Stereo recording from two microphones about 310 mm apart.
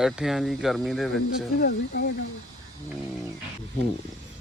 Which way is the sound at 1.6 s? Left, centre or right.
Left.